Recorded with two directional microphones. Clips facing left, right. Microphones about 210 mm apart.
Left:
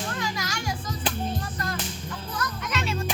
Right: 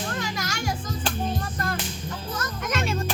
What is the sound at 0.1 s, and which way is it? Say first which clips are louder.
Music: right 1 dB; 45° right (ahead or behind).